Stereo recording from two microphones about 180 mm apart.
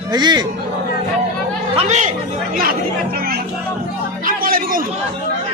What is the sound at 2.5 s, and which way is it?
Speech, 50° right (ahead or behind).